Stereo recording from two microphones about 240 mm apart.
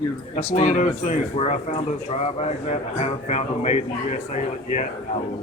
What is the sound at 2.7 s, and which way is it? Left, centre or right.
Speech, left.